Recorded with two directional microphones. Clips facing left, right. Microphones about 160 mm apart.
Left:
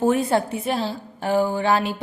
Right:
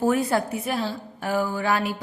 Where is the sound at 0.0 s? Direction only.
25° left (ahead or behind).